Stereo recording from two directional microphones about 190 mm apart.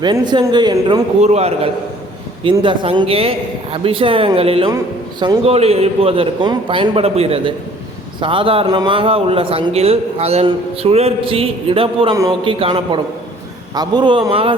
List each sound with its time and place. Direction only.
0.0 s a man's voice: 25° right (ahead or behind)
1.2 s a man's voice: 35° right (ahead or behind)
12.1 s a man's voice: 15° right (ahead or behind)
12.5 s a man's voice: 30° right (ahead or behind)